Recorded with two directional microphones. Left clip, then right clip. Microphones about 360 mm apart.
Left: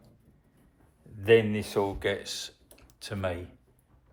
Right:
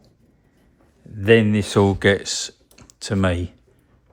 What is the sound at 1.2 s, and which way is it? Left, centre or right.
Speech, right.